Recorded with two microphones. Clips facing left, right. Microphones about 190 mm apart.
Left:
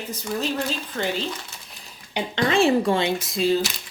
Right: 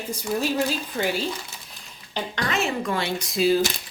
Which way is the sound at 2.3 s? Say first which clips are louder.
Left 8 dB; 30° left (ahead or behind).